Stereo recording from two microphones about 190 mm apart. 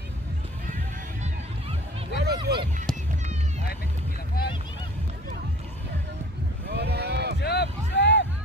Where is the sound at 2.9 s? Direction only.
5° left (ahead or behind).